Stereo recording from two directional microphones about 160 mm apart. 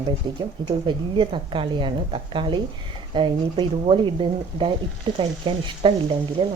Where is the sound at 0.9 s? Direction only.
30° right (ahead or behind).